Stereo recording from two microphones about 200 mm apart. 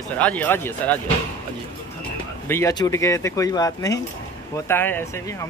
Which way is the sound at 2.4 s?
15° left (ahead or behind).